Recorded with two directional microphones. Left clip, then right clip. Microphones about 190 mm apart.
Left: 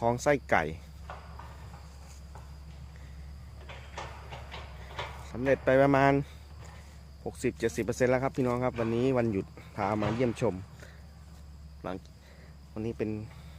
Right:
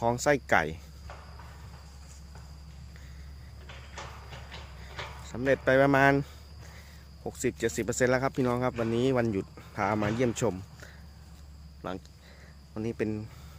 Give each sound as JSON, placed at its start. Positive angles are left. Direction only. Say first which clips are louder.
{"t": 0.0, "sound": "speech", "louder": "right 1 dB", "side_deg": -5}
{"t": 3.7, "sound": "a sound", "louder": "left 1 dB", "side_deg": 35}
{"t": 5.5, "sound": "speech", "louder": "right 1 dB", "side_deg": -5}
{"t": 7.3, "sound": "speech", "louder": "right 1 dB", "side_deg": -5}